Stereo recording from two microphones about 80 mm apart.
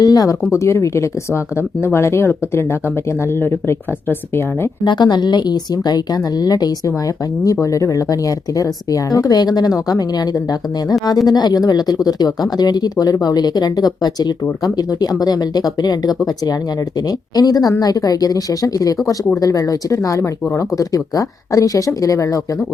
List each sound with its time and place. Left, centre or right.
0.0 s speech: left
0.5 s speech: left
4.8 s speech: left
7.4 s speech: left